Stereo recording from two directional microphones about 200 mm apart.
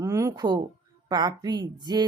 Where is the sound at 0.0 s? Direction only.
15° right (ahead or behind).